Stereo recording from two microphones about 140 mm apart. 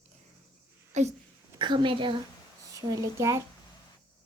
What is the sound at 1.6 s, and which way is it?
A woman's voice, 35° right (ahead or behind).